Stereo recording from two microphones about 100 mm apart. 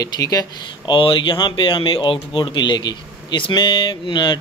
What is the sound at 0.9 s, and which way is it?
A man's voice, 60° left (ahead or behind).